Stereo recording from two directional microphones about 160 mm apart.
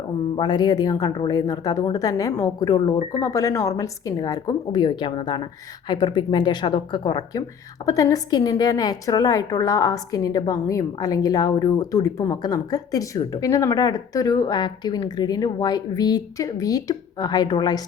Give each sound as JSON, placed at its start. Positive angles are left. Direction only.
{"t": 0.3, "sound": "a woman's voice", "side_deg": 25}